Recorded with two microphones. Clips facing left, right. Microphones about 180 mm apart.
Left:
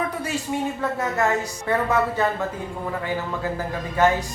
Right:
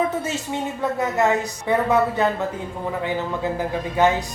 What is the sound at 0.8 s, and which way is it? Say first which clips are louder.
A man's voice: right 7 dB; 15° right (ahead or behind).